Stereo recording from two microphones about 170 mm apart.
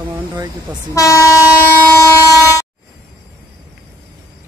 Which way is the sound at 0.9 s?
15° left (ahead or behind).